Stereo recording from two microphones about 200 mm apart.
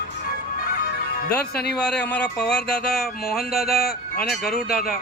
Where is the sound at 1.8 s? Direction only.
5° left (ahead or behind).